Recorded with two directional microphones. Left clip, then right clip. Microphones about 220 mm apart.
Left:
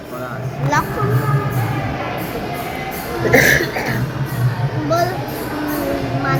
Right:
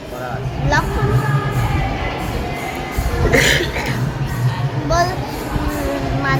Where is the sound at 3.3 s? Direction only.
5° left (ahead or behind).